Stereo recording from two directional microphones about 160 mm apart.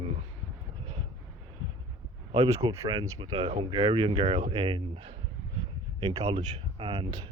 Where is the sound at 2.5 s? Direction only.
20° right (ahead or behind).